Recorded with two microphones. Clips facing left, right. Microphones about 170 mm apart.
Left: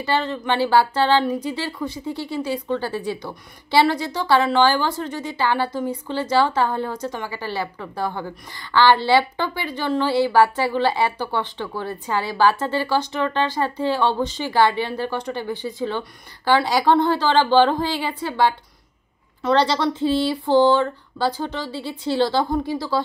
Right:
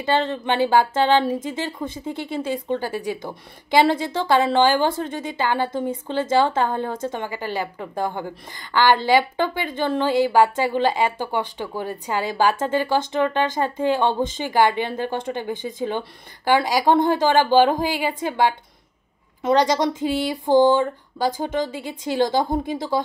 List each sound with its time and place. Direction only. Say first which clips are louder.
0.0 s speech: right 1 dB; 20° right (ahead or behind)